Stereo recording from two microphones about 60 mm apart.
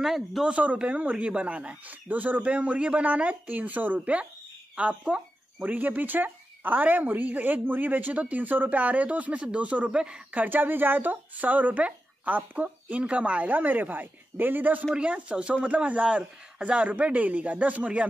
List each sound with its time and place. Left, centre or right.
0.0 s speech: centre
0.5 s speech: right
10.4 s speech: right
15.0 s speech: centre